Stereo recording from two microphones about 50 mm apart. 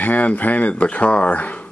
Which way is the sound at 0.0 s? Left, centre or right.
Left.